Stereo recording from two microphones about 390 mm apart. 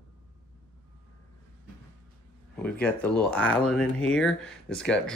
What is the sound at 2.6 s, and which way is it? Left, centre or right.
Speech, centre.